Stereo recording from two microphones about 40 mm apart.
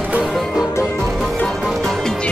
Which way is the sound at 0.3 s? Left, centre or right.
Centre.